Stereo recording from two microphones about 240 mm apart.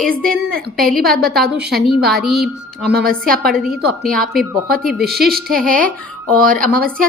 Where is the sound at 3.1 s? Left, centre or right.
Right.